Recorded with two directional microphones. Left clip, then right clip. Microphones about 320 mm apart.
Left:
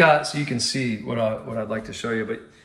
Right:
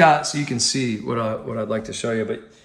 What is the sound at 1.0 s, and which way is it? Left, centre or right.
Speech, right.